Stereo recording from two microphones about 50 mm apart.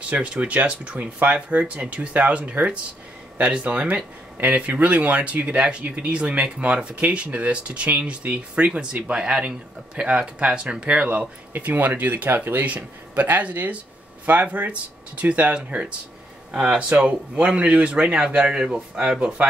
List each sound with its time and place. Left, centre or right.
0.1 s speech: right
11.5 s speech: right; by 19.1 s centre